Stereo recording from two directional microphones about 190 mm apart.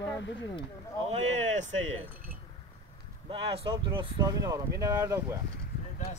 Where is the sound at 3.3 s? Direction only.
30° right (ahead or behind).